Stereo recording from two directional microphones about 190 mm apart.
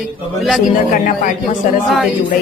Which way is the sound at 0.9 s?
45° left (ahead or behind).